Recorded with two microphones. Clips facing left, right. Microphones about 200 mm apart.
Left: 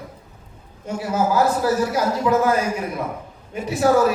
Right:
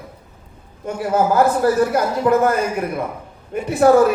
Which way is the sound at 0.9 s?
55° right (ahead or behind).